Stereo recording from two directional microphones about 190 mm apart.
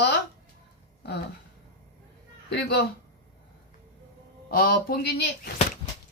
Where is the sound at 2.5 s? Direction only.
60° left (ahead or behind).